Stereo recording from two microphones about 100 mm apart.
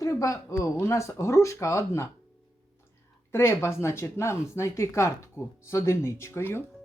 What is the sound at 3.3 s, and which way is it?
Speech, 25° left (ahead or behind).